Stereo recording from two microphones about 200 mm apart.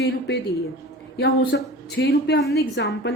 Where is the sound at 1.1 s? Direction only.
55° left (ahead or behind).